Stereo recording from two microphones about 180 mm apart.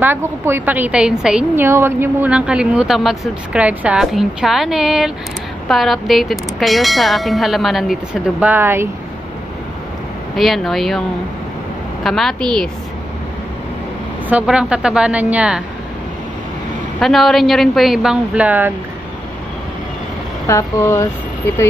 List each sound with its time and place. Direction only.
0.0 s a woman's voice: 10° right (ahead or behind)
10.3 s a woman's voice: centre (ahead or behind)
14.3 s a woman's voice: 5° right (ahead or behind)
17.0 s a woman's voice: centre (ahead or behind)
20.4 s speech: 15° left (ahead or behind)